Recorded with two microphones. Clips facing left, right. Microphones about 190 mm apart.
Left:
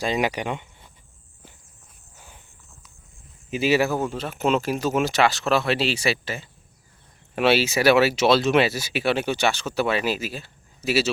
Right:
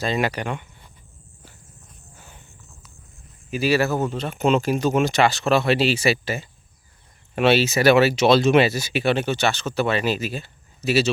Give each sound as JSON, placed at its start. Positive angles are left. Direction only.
{"t": 0.0, "sound": "speech", "side_deg": 15}
{"t": 2.1, "sound": "a sound", "side_deg": 10}
{"t": 3.5, "sound": "speech", "side_deg": 20}
{"t": 7.3, "sound": "speech", "side_deg": 5}